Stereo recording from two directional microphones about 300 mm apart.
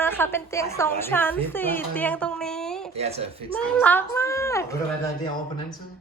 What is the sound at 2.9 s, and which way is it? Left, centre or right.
Speech, right.